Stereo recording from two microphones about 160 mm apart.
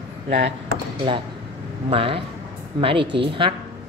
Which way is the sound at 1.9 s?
35° right (ahead or behind).